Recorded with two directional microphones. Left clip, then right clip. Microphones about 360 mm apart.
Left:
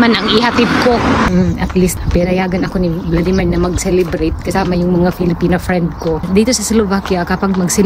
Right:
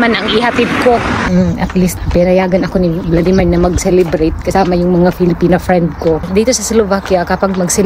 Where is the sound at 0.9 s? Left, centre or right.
Left.